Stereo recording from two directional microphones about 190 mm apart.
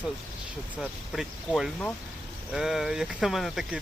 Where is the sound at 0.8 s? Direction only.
Centre (ahead or behind).